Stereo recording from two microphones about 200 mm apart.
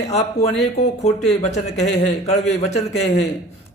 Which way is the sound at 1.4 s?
35° left (ahead or behind).